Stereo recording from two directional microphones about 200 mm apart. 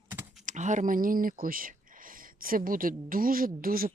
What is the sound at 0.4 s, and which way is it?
Speech, 35° right (ahead or behind).